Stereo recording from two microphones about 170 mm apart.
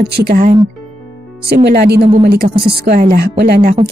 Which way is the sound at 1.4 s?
70° right (ahead or behind).